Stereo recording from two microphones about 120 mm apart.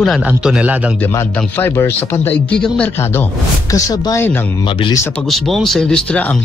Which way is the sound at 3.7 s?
30° left (ahead or behind).